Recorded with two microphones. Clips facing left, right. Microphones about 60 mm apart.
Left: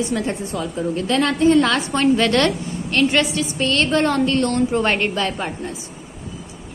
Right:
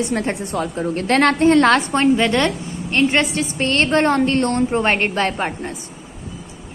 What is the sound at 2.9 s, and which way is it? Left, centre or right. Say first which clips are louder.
A woman's voice: right 1 dB; right.